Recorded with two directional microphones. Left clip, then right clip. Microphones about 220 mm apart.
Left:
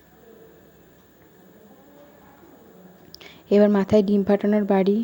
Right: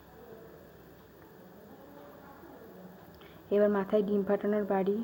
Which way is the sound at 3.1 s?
45° left (ahead or behind).